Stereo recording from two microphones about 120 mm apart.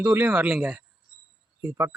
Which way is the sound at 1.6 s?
20° right (ahead or behind).